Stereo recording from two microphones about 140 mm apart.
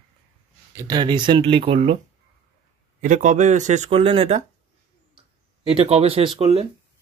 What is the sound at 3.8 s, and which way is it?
Speech, 40° right (ahead or behind).